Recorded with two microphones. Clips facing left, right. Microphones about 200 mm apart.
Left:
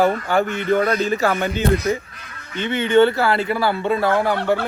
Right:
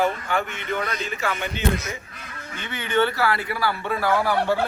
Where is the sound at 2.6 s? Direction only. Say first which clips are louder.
Left 8 dB; 25° left (ahead or behind).